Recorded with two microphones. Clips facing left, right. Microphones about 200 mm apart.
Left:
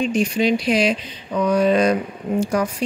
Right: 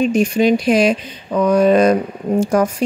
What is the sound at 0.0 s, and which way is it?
Speech, 45° right (ahead or behind).